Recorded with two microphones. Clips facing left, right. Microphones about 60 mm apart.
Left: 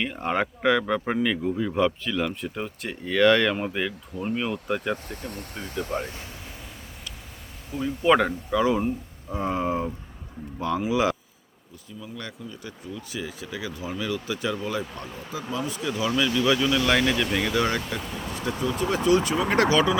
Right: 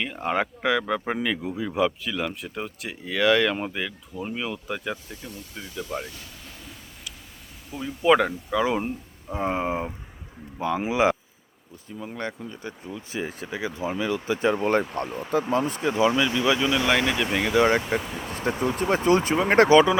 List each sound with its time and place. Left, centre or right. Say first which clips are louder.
0.0 s speech: even; centre
5.0 s speech: left 4 dB; left
7.8 s speech: even; centre
8.6 s speech: left 2 dB; right
11.9 s speech: right 5 dB; right
15.0 s speech: right 8 dB; right
15.4 s speech: right 5 dB; right
18.0 s speech: right 1 dB; centre
18.6 s speech: right 1 dB; right